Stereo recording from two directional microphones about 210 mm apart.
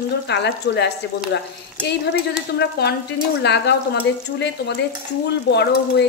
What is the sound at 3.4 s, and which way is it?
Speech, 55° left (ahead or behind).